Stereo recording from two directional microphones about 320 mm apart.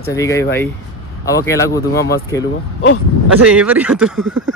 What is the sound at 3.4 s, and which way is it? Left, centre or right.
Speech, centre.